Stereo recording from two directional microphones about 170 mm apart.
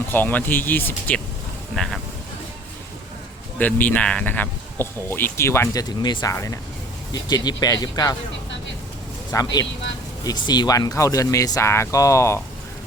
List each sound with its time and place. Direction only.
0.1 s speech: 10° left (ahead or behind)
1.7 s vehicle: 5° left (ahead or behind)
3.6 s speech: 10° left (ahead or behind)
9.3 s speech: 20° left (ahead or behind)